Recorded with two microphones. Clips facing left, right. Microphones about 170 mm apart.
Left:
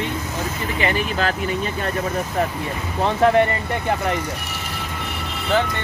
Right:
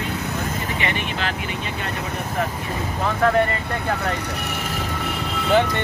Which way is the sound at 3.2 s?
20° left (ahead or behind).